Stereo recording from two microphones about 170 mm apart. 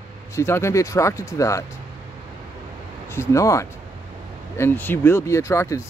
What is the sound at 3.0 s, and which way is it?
Speech, 15° left (ahead or behind).